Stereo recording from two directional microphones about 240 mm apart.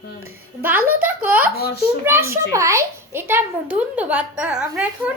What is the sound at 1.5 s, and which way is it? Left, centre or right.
Speech, left.